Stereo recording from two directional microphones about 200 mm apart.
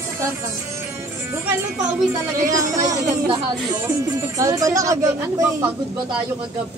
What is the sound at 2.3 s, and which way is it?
Speech, 15° right (ahead or behind).